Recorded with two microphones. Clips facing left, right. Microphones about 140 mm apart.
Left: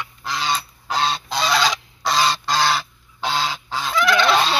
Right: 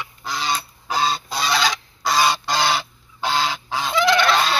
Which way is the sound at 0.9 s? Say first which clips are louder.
Even; 5° right (ahead or behind).